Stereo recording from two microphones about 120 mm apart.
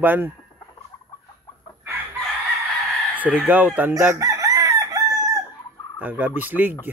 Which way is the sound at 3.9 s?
25° right (ahead or behind).